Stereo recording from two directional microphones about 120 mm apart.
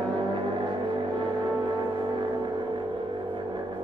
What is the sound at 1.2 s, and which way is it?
Music, 40° right (ahead or behind).